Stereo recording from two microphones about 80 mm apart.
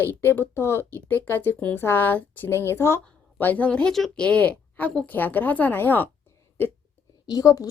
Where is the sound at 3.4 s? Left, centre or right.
Left.